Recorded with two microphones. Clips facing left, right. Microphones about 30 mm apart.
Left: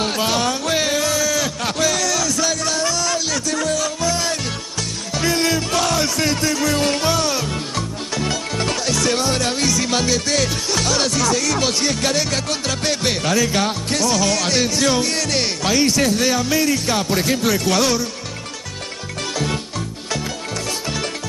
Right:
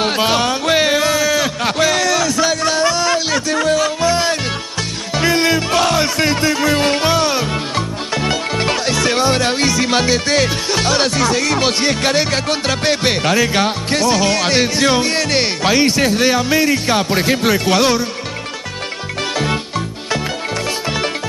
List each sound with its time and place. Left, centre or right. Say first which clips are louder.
0.0 s a sound: right 4 dB; right
5.1 s music: right 4 dB; right
19.3 s music: right 4 dB; right